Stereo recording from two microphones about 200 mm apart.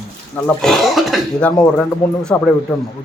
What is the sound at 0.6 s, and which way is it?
A man's voice, centre (ahead or behind).